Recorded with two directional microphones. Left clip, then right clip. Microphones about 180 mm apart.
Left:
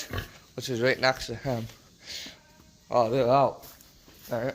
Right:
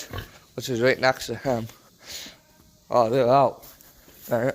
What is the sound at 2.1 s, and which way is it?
Speech, 45° right (ahead or behind).